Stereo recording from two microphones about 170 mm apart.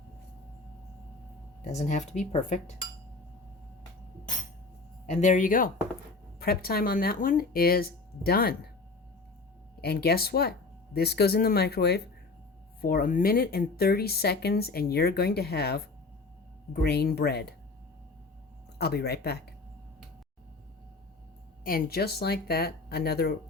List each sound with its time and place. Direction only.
1.7 s speech: 40° left (ahead or behind)
5.0 s speech: 45° left (ahead or behind)
6.4 s speech: 65° left (ahead or behind)
9.8 s speech: 70° left (ahead or behind)
12.8 s speech: 60° left (ahead or behind)
16.8 s speech: 70° left (ahead or behind)
18.8 s speech: 70° left (ahead or behind)
21.6 s speech: 60° left (ahead or behind)